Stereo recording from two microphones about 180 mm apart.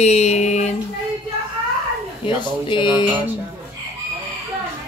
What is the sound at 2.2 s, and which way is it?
Speech, 25° left (ahead or behind).